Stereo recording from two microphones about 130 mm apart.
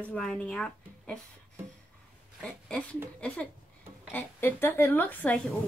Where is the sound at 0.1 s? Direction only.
5° left (ahead or behind).